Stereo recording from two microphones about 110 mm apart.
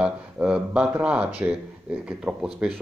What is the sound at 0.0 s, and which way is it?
A man's voice, 10° right (ahead or behind).